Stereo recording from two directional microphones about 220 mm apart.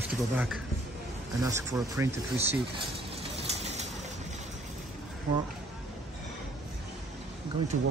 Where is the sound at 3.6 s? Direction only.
30° right (ahead or behind).